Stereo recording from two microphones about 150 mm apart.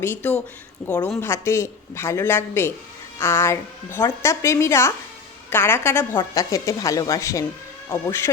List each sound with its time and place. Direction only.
0.0 s a woman's voice: 15° left (ahead or behind)
1.2 s a woman's voice: 15° left (ahead or behind)